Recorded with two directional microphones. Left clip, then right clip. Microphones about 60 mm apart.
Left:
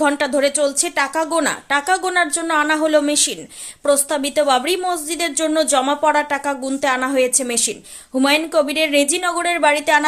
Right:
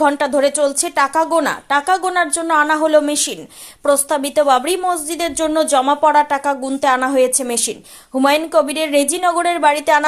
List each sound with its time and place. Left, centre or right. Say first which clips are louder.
0.2 s speech: right 2 dB; centre
0.4 s speech: right 2 dB; right
2.0 s speech: right 1 dB; centre
2.5 s speech: right 4 dB; right
3.8 s speech: right 2 dB; centre
4.2 s speech: right 3 dB; right